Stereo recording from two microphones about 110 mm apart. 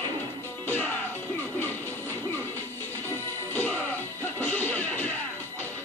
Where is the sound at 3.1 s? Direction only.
15° left (ahead or behind).